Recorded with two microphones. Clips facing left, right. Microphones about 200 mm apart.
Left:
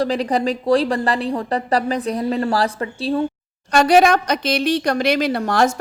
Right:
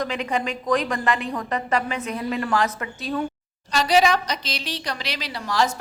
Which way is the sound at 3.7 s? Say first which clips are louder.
Left 6 dB; 55° left (ahead or behind).